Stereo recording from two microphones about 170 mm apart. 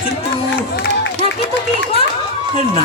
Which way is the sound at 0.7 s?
75° left (ahead or behind).